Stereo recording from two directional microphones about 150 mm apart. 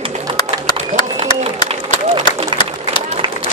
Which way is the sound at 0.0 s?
35° right (ahead or behind).